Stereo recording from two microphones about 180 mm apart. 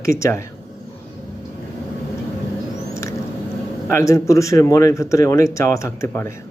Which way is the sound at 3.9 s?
15° left (ahead or behind).